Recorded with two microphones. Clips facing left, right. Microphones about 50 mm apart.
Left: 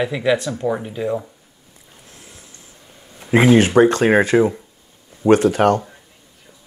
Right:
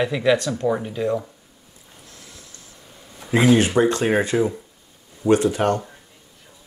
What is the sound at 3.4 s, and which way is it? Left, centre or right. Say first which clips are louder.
Speech: left 4 dB; left.